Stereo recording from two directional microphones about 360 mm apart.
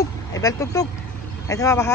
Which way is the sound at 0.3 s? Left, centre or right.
Centre.